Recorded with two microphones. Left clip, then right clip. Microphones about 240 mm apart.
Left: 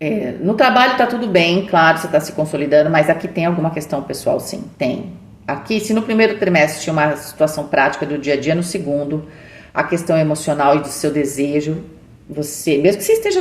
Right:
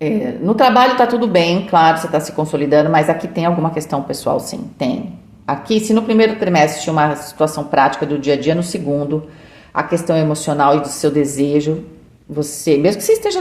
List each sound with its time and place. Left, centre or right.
0.0 s a woman's voice: right
9.7 s a woman's voice: right